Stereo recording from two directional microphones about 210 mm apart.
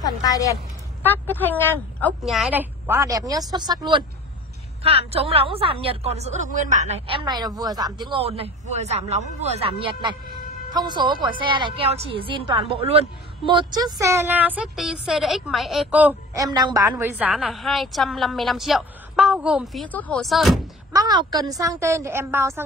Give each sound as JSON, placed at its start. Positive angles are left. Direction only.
{"t": 0.0, "sound": "a woman's voice", "side_deg": 15}
{"t": 20.9, "sound": "a woman's voice", "side_deg": -20}